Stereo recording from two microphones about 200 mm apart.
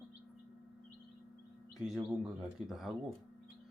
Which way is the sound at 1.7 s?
Centre (ahead or behind).